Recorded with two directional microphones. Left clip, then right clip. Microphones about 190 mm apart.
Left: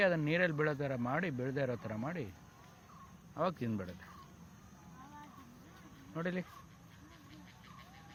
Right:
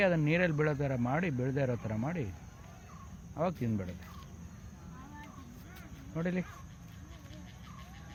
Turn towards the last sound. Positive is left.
turn(degrees=10)  # may be behind; listen again after turning